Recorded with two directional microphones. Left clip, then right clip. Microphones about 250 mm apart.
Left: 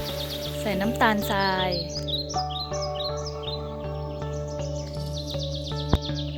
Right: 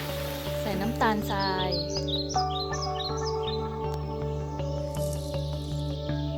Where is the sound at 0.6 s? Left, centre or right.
Centre.